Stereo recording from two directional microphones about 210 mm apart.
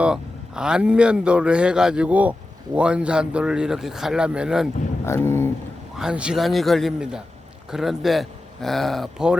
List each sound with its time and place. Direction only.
0.0 s a man's voice: 5° right (ahead or behind)
5.0 s speech: 10° left (ahead or behind)
6.0 s a man's voice: 5° right (ahead or behind)